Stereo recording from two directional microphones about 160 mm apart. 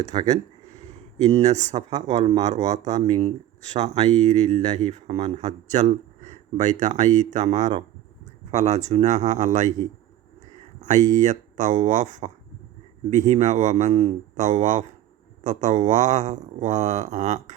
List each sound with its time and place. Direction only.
0.1 s speech: 25° right (ahead or behind)
1.2 s speech: 45° right (ahead or behind)